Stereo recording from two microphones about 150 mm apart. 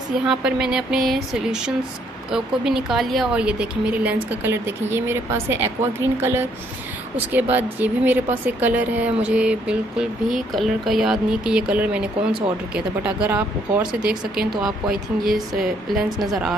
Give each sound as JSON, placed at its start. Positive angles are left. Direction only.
{"t": 0.3, "sound": "speech", "side_deg": -5}
{"t": 15.9, "sound": "speech", "side_deg": 0}